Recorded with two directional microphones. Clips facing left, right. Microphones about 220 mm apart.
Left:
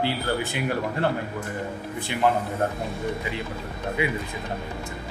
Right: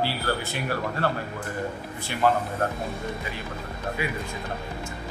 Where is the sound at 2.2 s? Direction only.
20° left (ahead or behind).